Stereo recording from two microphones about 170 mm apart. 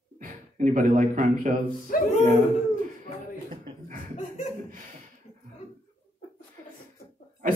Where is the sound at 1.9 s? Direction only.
60° left (ahead or behind).